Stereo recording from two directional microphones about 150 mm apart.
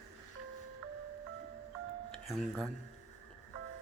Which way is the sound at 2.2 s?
Centre (ahead or behind).